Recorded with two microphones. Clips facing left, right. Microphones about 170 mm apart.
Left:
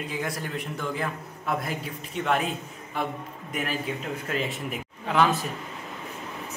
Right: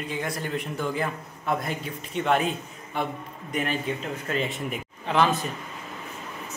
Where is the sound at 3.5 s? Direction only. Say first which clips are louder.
Right 2 dB; 5° left (ahead or behind).